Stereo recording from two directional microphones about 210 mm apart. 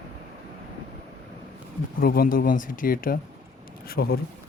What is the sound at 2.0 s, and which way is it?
Speech, 45° left (ahead or behind).